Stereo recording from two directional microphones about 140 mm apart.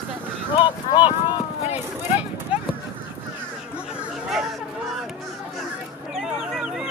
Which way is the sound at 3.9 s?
5° right (ahead or behind).